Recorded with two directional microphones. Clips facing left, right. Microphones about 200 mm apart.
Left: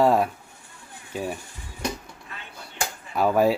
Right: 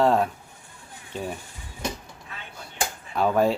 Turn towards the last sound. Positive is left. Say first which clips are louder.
# left 1 dB
turn(degrees=10)  # may be behind; listen again after turning